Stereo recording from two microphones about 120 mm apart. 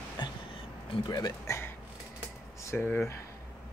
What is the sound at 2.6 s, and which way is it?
Speech, 15° left (ahead or behind).